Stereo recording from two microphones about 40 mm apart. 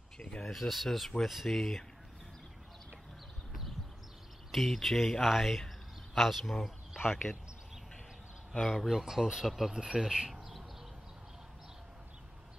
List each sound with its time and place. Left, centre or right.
0.2 s speech: left
0.5 s speech: centre
4.5 s speech: centre
8.5 s speech: centre